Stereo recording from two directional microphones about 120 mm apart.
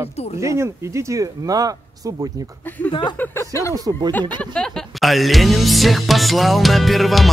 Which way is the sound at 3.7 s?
30° right (ahead or behind).